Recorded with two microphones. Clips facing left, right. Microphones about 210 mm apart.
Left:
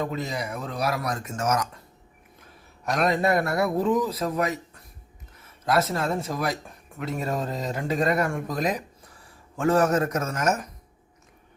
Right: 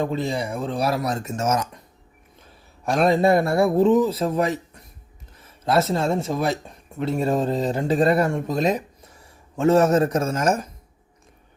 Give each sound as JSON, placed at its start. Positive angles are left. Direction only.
{"t": 0.0, "sound": "a man's voice", "side_deg": -30}
{"t": 2.8, "sound": "a man's voice", "side_deg": -30}